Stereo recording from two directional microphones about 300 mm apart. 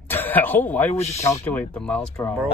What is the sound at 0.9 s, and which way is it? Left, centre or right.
Speech, left.